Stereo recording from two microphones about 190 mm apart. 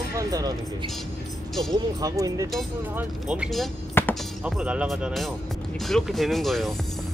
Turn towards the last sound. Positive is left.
turn(degrees=0)  # may be behind; listen again after turning